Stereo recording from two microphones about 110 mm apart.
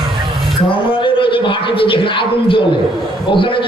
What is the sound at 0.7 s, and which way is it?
Speech, 50° left (ahead or behind).